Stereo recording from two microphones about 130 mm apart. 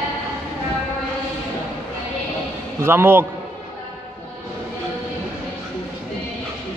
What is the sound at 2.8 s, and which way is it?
Speech, 15° right (ahead or behind).